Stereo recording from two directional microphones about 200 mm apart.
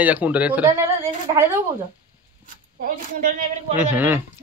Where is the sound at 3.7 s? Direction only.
10° right (ahead or behind).